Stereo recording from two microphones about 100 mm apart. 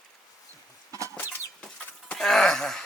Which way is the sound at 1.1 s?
20° left (ahead or behind).